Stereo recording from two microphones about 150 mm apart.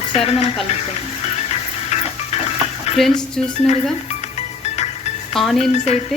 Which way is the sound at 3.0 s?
5° left (ahead or behind).